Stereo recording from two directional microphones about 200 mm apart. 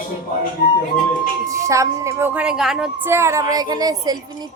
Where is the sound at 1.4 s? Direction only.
15° right (ahead or behind).